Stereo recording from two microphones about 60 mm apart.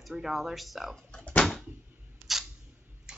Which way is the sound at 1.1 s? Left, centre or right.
Centre.